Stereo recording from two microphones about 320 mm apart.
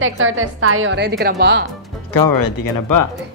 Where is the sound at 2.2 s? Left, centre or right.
Left.